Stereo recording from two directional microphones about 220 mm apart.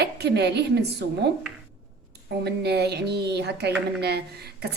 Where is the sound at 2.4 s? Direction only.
50° right (ahead or behind).